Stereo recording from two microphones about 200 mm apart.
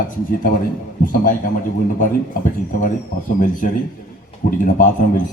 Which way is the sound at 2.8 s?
40° left (ahead or behind).